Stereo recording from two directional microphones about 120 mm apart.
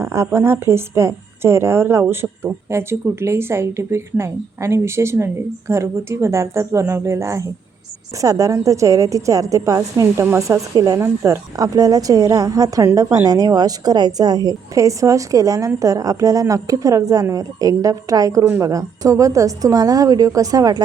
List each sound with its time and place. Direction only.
0.0 s a woman's voice: 25° right (ahead or behind)